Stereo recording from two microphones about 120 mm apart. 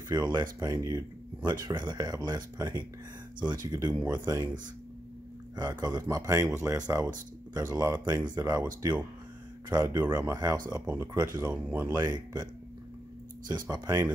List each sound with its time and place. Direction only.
0.1 s speech: 35° right (ahead or behind)
5.6 s speech: 35° right (ahead or behind); by 11.9 s 15° right (ahead or behind)
11.9 s speech: 35° right (ahead or behind)
13.5 s speech: 30° right (ahead or behind)